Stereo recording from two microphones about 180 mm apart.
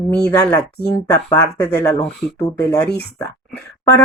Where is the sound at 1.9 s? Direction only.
5° left (ahead or behind).